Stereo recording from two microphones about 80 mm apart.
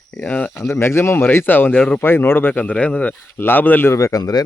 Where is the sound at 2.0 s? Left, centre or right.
Left.